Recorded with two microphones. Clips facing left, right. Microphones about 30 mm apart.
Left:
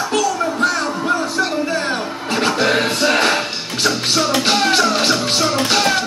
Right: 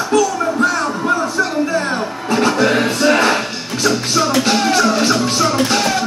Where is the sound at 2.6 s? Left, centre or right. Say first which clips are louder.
Right 2 dB; left.